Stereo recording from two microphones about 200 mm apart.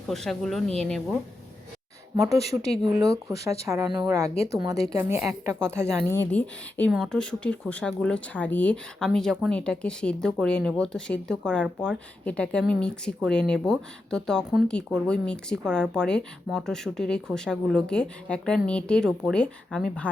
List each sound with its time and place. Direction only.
0.1 s speech: centre (ahead or behind)
2.4 s speech: 30° left (ahead or behind)
3.0 s speech: 15° right (ahead or behind)
6.1 s speech: 10° left (ahead or behind)